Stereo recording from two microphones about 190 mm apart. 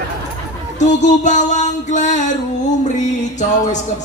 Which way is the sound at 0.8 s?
40° left (ahead or behind).